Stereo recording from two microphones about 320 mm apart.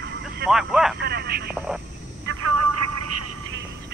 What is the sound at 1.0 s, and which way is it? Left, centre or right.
Speech, right.